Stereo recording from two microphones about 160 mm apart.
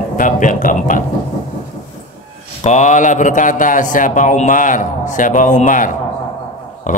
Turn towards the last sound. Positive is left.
turn(degrees=50)  # may be behind; listen again after turning